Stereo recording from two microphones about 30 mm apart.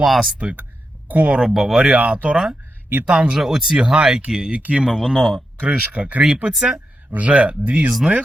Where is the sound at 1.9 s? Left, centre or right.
Right.